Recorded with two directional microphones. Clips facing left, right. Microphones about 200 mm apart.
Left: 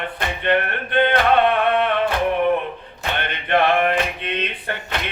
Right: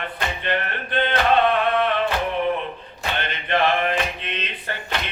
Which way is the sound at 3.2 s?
55° left (ahead or behind).